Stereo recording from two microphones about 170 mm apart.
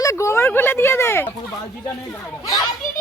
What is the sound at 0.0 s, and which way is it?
Speech, 15° left (ahead or behind).